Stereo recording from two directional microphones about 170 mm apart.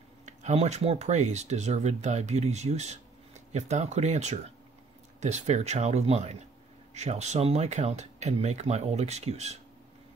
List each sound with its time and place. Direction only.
0.2 s speech: 40° right (ahead or behind)